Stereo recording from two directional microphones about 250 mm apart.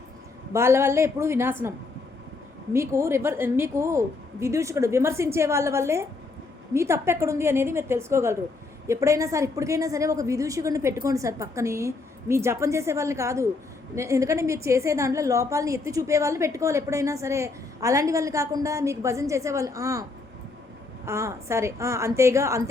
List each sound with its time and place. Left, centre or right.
0.5 s a woman's voice: centre
2.7 s a woman's voice: centre